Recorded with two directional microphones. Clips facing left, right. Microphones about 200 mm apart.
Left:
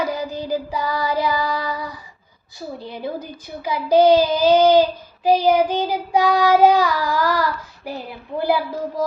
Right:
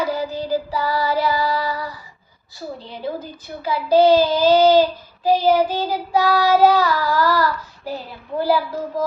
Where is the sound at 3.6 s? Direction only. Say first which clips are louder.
Even; 15° left (ahead or behind).